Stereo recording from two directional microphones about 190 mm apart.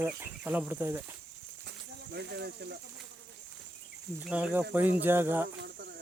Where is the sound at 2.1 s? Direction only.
60° right (ahead or behind).